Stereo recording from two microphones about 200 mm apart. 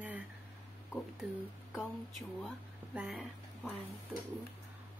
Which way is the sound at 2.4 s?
5° right (ahead or behind).